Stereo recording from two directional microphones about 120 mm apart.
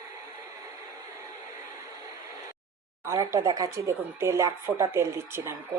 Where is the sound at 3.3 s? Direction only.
30° right (ahead or behind).